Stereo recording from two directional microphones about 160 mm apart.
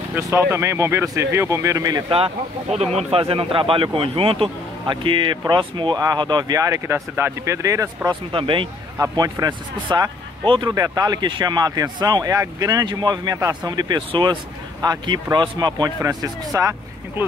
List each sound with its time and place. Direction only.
0.1 s speech: 15° right (ahead or behind)
2.1 s speech: 40° right (ahead or behind); by 8.2 s 20° right (ahead or behind)
8.3 s speech: 30° right (ahead or behind)
8.9 s speech: 20° right (ahead or behind)